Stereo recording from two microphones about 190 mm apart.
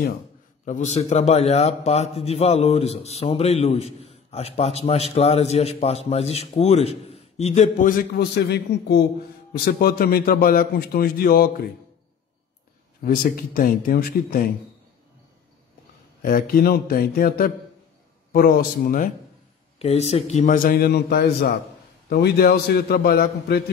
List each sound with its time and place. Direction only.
0.7 s a man's voice: 35° left (ahead or behind)
8.1 s a man's voice: 60° left (ahead or behind)
9.5 s a man's voice: 50° left (ahead or behind)
13.0 s a man's voice: 50° left (ahead or behind)
16.2 s a man's voice: 50° left (ahead or behind)
19.8 s a man's voice: 35° left (ahead or behind); by 23.6 s 55° left (ahead or behind)